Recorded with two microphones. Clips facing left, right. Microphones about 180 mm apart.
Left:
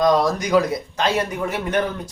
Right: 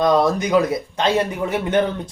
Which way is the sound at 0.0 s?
25° right (ahead or behind).